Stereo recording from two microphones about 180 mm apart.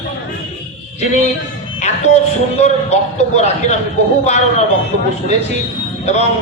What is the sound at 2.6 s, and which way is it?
A man's voice, 40° left (ahead or behind).